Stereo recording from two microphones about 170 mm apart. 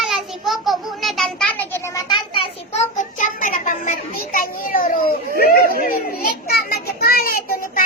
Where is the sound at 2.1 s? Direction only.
30° left (ahead or behind).